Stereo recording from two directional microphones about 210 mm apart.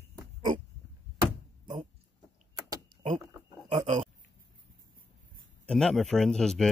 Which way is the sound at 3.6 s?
25° right (ahead or behind).